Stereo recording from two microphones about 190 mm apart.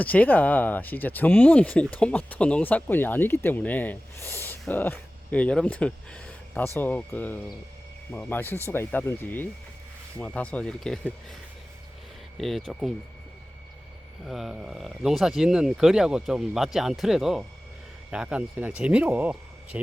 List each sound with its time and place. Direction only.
0.0 s speech: 10° left (ahead or behind)
12.4 s speech: centre (ahead or behind)
14.3 s speech: centre (ahead or behind)